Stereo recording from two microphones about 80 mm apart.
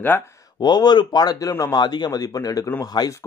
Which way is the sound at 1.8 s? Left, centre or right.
Left.